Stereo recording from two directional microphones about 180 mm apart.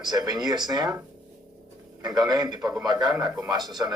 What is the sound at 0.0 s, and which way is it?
A man's voice, 20° right (ahead or behind).